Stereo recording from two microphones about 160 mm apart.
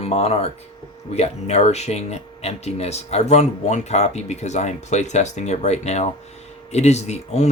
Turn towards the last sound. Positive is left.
turn(degrees=45)  # may be behind; listen again after turning